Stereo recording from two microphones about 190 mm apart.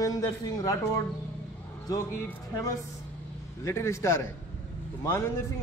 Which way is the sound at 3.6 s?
15° left (ahead or behind).